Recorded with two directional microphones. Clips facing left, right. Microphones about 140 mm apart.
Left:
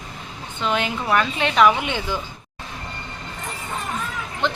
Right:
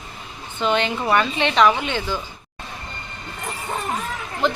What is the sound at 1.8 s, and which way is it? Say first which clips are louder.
Speech: right 1 dB; 15° left (ahead or behind).